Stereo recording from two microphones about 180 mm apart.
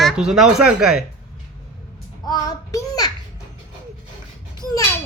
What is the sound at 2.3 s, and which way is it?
Speech, 20° left (ahead or behind).